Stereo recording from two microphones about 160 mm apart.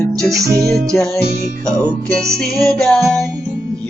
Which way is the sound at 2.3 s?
5° left (ahead or behind).